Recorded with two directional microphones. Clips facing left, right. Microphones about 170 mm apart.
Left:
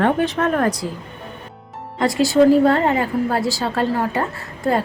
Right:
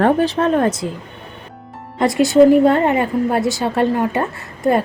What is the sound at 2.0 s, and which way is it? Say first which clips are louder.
A woman's voice: right 3 dB; 20° right (ahead or behind).